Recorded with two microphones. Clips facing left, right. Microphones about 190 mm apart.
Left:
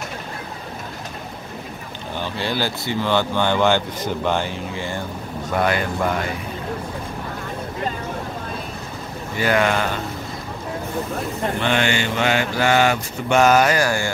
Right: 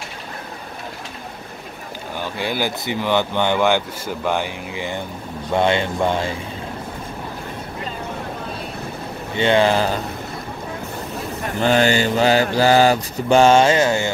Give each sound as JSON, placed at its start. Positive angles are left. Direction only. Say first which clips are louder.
{"t": 2.3, "sound": "speech", "louder": "right 1 dB", "side_deg": -15}
{"t": 9.3, "sound": "speech", "louder": "right 3 dB", "side_deg": -25}
{"t": 11.6, "sound": "mantra", "louder": "right 7 dB", "side_deg": -40}